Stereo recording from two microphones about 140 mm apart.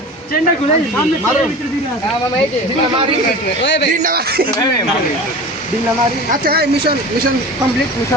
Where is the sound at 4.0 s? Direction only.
90° right.